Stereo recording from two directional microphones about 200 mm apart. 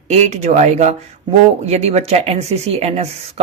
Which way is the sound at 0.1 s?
35° right (ahead or behind).